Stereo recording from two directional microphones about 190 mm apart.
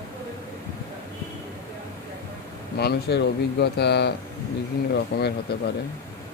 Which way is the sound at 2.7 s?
60° left (ahead or behind).